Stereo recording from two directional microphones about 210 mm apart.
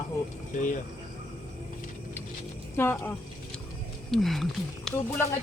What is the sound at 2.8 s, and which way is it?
Speech, 10° left (ahead or behind).